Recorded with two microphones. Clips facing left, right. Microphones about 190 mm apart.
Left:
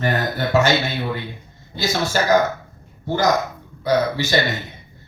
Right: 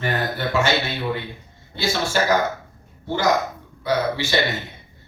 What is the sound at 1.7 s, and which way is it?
Speech, 40° left (ahead or behind).